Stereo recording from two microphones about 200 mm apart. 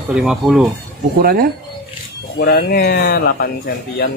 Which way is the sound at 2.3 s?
50° left (ahead or behind).